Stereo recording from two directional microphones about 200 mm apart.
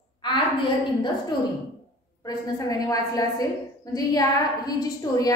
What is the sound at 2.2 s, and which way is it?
A woman's voice, 20° left (ahead or behind).